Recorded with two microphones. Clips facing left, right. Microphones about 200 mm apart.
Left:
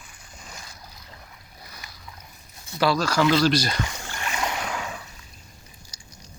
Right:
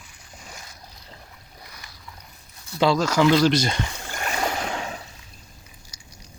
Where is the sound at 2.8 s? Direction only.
20° right (ahead or behind).